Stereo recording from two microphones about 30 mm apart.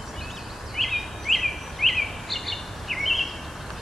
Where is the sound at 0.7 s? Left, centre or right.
Centre.